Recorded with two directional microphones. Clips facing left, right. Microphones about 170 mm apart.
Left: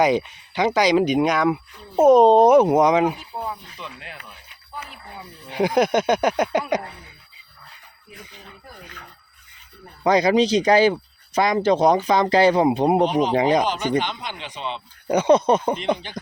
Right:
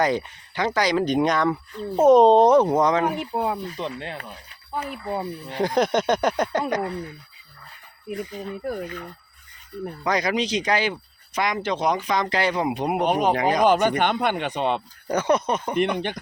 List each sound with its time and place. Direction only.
0.0 s speech: 15° left (ahead or behind)
3.2 s speech: 70° right (ahead or behind)
3.7 s speech: 35° right (ahead or behind)
4.2 s speech: 50° right (ahead or behind)
5.5 s speech: 10° left (ahead or behind)
10.0 s speech: 25° left (ahead or behind)
13.1 s a man's voice: 55° right (ahead or behind)
13.3 s speech: 25° left (ahead or behind)
13.6 s a man's voice: 55° right (ahead or behind)
15.0 s speech: 20° left (ahead or behind)
15.8 s a man's voice: 60° right (ahead or behind)